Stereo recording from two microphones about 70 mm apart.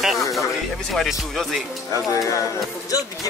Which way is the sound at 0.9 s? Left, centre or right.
Centre.